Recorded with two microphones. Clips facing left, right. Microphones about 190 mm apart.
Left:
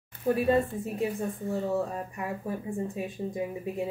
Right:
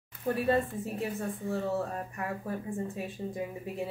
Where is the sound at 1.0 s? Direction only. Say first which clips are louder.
Left 5 dB; 15° left (ahead or behind).